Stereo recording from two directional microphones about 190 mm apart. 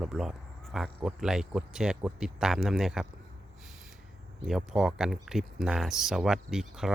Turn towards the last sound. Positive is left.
turn(degrees=0)  # may be behind; listen again after turning